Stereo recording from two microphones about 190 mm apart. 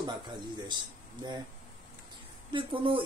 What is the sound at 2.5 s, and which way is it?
Speech, 25° right (ahead or behind).